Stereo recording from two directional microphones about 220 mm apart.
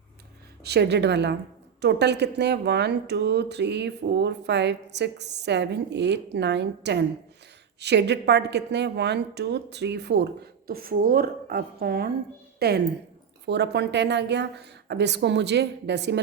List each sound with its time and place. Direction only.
0.6 s a woman's voice: 50° right (ahead or behind)